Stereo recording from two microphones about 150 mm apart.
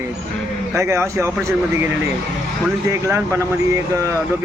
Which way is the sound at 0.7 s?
20° right (ahead or behind).